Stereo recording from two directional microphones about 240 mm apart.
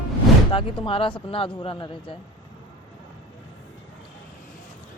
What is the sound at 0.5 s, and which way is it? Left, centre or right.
Speech, left.